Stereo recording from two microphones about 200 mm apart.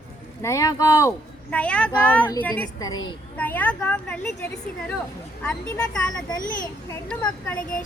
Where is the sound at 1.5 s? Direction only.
5° left (ahead or behind).